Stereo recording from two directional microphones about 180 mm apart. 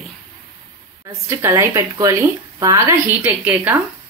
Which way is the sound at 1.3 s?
15° right (ahead or behind).